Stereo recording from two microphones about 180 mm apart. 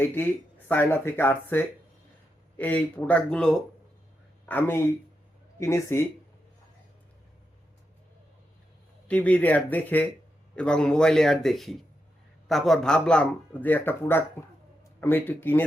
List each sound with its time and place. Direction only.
0.0 s speech: 10° left (ahead or behind)
9.0 s speech: 5° left (ahead or behind)